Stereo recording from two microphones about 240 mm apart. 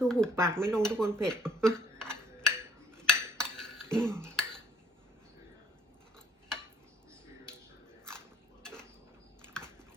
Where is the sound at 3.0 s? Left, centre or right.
Centre.